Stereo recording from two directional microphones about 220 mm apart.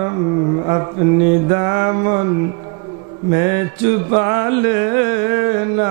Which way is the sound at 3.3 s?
15° right (ahead or behind).